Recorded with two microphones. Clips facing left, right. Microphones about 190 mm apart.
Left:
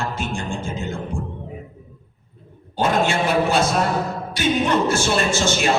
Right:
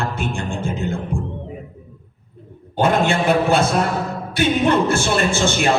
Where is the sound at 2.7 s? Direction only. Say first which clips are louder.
Right 2 dB; 55° right (ahead or behind).